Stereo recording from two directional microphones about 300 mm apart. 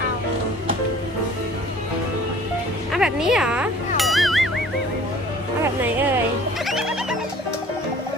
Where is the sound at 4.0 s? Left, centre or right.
Centre.